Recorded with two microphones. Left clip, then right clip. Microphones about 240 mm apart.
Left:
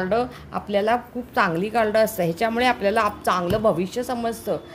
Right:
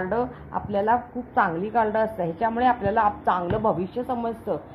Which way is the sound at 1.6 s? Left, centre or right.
Left.